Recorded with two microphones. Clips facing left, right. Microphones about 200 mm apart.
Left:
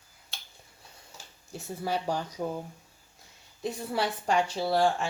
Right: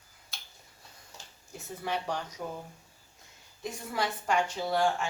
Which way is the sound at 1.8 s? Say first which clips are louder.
Left 3 dB; 35° left (ahead or behind).